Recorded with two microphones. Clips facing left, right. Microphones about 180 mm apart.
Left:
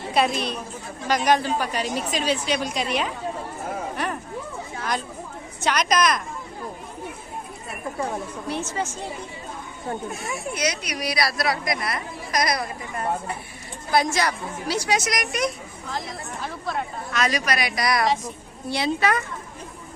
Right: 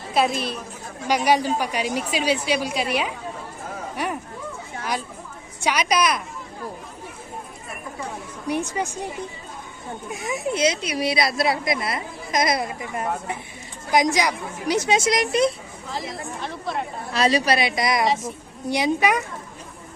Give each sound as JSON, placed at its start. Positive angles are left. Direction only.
{"t": 0.1, "sound": "a woman's voice", "side_deg": 0}
{"t": 3.9, "sound": "a sound", "side_deg": -10}
{"t": 5.5, "sound": "a woman's voice", "side_deg": -10}
{"t": 8.4, "sound": "a woman's voice", "side_deg": -15}
{"t": 10.1, "sound": "speech", "side_deg": -20}
{"t": 15.9, "sound": "speech", "side_deg": 0}
{"t": 17.1, "sound": "speech", "side_deg": -30}
{"t": 18.0, "sound": "speech", "side_deg": 0}
{"t": 18.7, "sound": "a woman's voice", "side_deg": -15}